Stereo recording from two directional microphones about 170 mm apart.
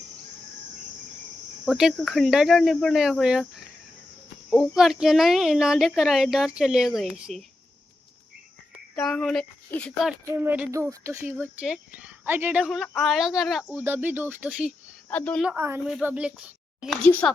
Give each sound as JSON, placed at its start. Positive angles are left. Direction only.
{"t": 1.6, "sound": "speech", "side_deg": 0}
{"t": 4.4, "sound": "speech", "side_deg": 0}
{"t": 9.0, "sound": "speech", "side_deg": 5}
{"t": 10.3, "sound": "speech", "side_deg": -10}
{"t": 11.2, "sound": "speech", "side_deg": -5}
{"t": 15.1, "sound": "speech", "side_deg": 5}
{"t": 15.4, "sound": "speech", "side_deg": -10}